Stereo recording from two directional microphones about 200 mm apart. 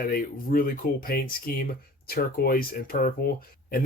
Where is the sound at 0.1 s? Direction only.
45° left (ahead or behind).